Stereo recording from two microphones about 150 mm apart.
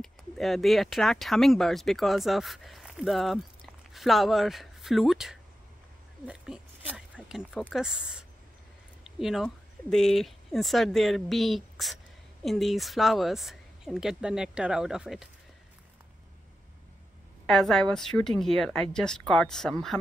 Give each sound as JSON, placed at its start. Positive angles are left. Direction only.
{"t": 0.0, "sound": "speech", "side_deg": 0}
{"t": 6.2, "sound": "a sound", "side_deg": -5}
{"t": 9.0, "sound": "a woman's voice", "side_deg": 0}
{"t": 17.5, "sound": "a woman's voice", "side_deg": 0}